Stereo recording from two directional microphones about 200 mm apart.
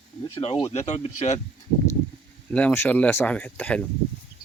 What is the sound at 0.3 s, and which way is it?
Speech, 25° left (ahead or behind).